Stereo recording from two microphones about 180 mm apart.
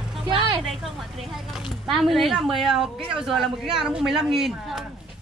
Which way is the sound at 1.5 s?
Centre (ahead or behind).